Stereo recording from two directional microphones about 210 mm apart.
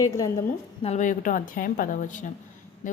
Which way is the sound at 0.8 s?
35° left (ahead or behind).